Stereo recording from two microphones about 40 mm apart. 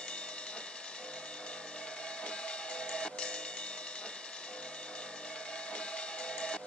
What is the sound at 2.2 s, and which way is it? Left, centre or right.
Music, left.